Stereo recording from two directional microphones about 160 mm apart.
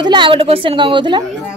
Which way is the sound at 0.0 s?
30° right (ahead or behind).